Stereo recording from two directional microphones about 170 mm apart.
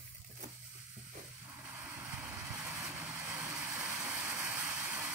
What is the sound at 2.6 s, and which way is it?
Vehicle, 5° right (ahead or behind).